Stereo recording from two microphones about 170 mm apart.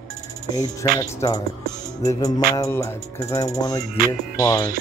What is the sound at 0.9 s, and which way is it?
Music, 20° left (ahead or behind).